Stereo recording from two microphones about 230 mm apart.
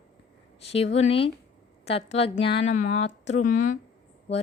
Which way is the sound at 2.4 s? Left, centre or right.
Left.